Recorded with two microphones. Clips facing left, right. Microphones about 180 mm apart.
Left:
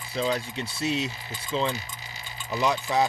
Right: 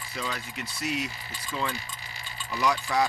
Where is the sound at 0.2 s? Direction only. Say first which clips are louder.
Left 8 dB; 30° left (ahead or behind).